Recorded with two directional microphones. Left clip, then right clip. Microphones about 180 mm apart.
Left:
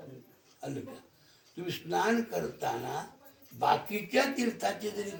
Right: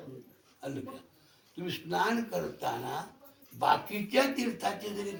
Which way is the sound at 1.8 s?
15° left (ahead or behind).